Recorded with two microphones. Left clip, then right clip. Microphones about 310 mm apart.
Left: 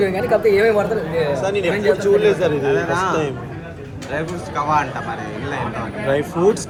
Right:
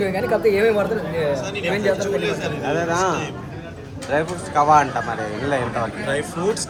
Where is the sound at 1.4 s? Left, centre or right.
Centre.